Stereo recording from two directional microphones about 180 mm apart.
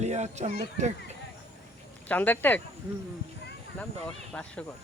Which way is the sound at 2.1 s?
10° left (ahead or behind).